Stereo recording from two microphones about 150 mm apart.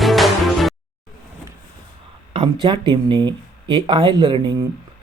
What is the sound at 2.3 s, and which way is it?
Speech, 35° right (ahead or behind).